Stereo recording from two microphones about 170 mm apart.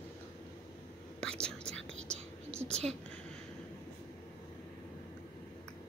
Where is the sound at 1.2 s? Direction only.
5° left (ahead or behind).